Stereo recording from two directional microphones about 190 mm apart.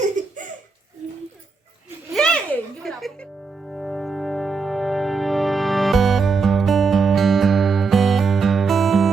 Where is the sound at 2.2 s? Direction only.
5° left (ahead or behind).